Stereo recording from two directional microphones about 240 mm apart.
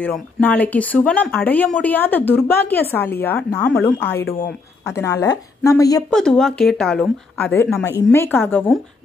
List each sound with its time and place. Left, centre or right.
0.0 s speech: centre
4.0 s speech: left
4.8 s speech: centre
6.0 s speech: centre